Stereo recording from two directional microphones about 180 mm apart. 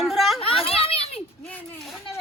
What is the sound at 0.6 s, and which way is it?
Children playing, 30° left (ahead or behind).